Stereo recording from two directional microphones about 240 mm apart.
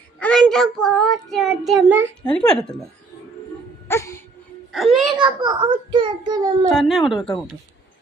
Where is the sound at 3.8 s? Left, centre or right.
Centre.